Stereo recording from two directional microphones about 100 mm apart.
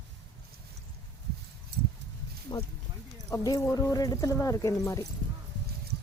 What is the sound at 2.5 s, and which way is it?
Speech, 35° left (ahead or behind).